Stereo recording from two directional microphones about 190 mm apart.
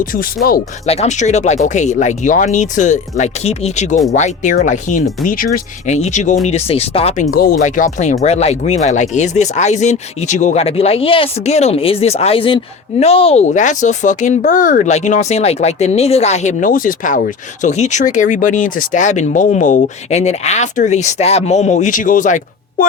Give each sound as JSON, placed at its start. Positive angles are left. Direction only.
{"t": 0.0, "sound": "speech", "side_deg": 50}
{"t": 0.9, "sound": "speech", "side_deg": 35}
{"t": 7.3, "sound": "speech", "side_deg": 50}